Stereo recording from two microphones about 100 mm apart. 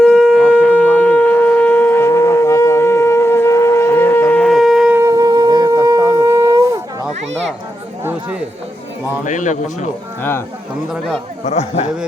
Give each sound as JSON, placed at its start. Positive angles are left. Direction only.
{"t": 0.0, "sound": "shofar", "side_deg": 5}
{"t": 4.4, "sound": "shofar", "side_deg": 0}
{"t": 4.9, "sound": "wind instrument", "side_deg": -30}
{"t": 8.0, "sound": "chatter", "side_deg": -15}
{"t": 11.4, "sound": "a man's voice", "side_deg": 90}